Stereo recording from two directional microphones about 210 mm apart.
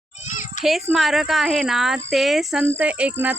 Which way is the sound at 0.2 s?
35° left (ahead or behind).